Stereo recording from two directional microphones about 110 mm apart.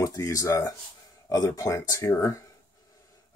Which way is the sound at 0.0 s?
35° left (ahead or behind).